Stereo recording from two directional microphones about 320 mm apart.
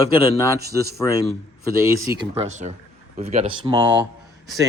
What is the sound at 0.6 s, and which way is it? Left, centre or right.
Speech, right.